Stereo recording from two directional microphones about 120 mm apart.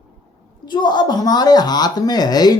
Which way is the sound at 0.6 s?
35° left (ahead or behind).